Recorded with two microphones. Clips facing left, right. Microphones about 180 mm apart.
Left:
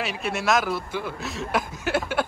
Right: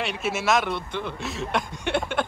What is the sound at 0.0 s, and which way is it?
Speech, centre (ahead or behind).